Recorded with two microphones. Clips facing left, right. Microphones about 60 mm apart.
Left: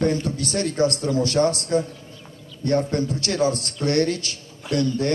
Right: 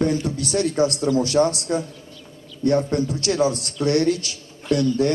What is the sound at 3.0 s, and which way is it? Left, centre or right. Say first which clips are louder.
A man's voice: right 1 dB; left.